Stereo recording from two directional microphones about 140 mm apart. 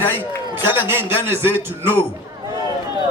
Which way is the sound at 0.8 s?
15° right (ahead or behind).